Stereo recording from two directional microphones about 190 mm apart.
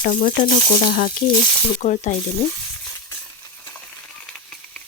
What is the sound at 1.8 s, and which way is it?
Speech, 40° left (ahead or behind).